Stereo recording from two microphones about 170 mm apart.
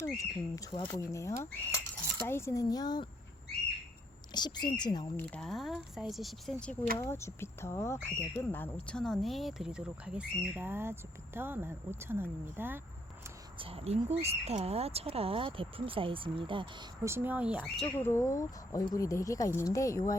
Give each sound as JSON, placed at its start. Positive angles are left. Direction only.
{"t": 0.0, "sound": "speech", "side_deg": 20}
{"t": 4.4, "sound": "speech", "side_deg": 25}
{"t": 5.1, "sound": "speech", "side_deg": 5}
{"t": 7.0, "sound": "speech", "side_deg": 15}
{"t": 13.6, "sound": "speech", "side_deg": -35}
{"t": 17.0, "sound": "speech", "side_deg": -15}
{"t": 17.8, "sound": "speech", "side_deg": 15}